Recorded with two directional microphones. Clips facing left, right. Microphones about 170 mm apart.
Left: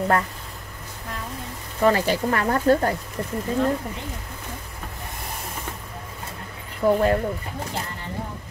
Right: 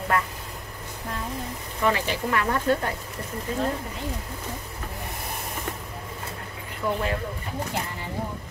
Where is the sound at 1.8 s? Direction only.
40° left (ahead or behind).